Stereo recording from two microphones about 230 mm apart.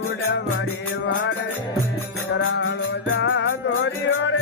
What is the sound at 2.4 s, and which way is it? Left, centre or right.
Music, left.